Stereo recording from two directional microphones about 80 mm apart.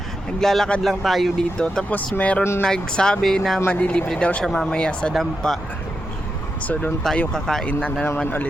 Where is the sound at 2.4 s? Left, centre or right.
Left.